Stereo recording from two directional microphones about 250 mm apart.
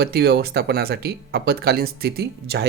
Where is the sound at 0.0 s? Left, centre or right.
Right.